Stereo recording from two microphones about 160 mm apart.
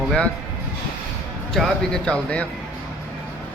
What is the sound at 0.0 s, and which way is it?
Speech, centre (ahead or behind).